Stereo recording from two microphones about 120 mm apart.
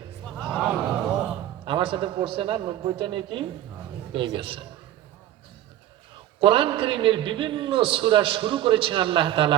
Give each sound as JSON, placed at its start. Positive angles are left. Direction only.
{"t": 0.5, "sound": "a sound", "side_deg": -5}
{"t": 1.6, "sound": "a man's voice", "side_deg": -45}
{"t": 6.4, "sound": "a man's voice", "side_deg": -45}